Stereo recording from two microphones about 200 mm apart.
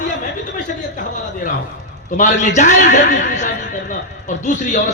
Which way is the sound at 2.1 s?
40° left (ahead or behind).